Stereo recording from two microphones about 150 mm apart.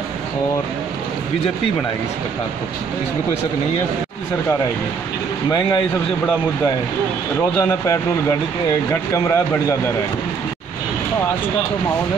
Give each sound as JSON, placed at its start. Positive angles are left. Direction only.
{"t": 7.5, "sound": "speech", "side_deg": 20}